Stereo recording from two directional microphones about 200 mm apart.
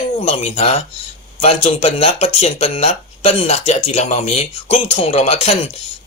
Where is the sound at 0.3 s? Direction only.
30° left (ahead or behind).